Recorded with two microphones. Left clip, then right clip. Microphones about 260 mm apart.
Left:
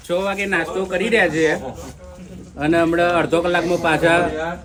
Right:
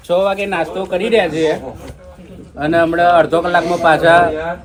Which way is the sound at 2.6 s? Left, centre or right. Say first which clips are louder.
Right 4 dB; centre.